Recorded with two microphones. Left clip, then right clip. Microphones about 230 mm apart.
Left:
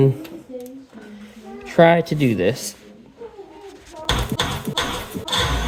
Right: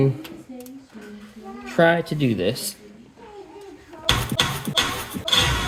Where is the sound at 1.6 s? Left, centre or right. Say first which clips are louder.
Left 4 dB; left.